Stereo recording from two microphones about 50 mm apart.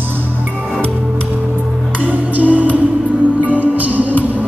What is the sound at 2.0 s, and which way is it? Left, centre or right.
Music, right.